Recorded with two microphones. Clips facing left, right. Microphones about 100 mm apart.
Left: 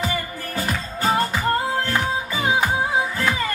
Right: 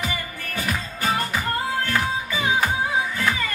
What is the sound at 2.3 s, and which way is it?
Music, 30° left (ahead or behind).